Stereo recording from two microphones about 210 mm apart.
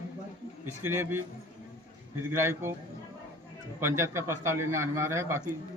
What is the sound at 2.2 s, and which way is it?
Speech, 10° right (ahead or behind).